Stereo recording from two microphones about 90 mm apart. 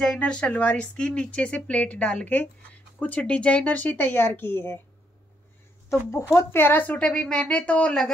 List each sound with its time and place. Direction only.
0.0 s speech: 10° left (ahead or behind); by 4.7 s 25° left (ahead or behind)
5.9 s speech: 30° left (ahead or behind); by 8.1 s 10° left (ahead or behind)